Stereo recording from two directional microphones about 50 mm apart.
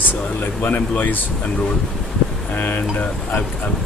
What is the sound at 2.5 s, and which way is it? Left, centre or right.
Speech, left.